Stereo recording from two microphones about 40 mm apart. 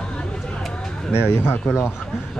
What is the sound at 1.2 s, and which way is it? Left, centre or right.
Speech, left.